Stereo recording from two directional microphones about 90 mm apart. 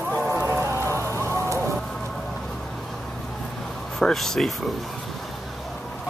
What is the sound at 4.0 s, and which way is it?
Speech, 5° left (ahead or behind).